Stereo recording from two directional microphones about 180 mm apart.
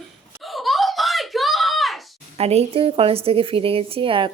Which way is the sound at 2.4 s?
35° right (ahead or behind).